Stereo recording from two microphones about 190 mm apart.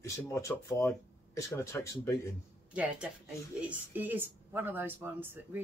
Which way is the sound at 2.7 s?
5° right (ahead or behind).